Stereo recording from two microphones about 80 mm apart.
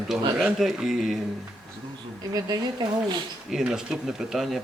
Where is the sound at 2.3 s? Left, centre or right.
Right.